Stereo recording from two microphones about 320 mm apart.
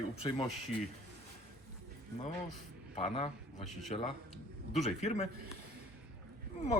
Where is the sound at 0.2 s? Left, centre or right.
Centre.